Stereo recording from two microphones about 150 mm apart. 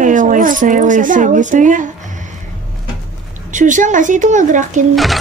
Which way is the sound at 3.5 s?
60° right (ahead or behind).